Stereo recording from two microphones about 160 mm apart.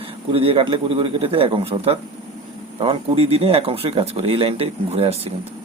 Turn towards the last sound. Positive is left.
turn(degrees=-40)  # may be behind; listen again after turning